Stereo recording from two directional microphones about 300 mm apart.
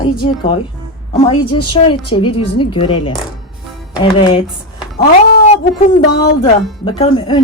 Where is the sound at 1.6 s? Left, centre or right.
Centre.